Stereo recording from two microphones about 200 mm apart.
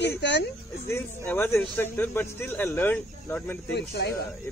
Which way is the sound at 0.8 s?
10° left (ahead or behind).